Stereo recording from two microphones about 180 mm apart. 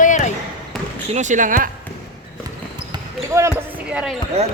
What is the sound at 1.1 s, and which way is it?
Speech, 40° right (ahead or behind).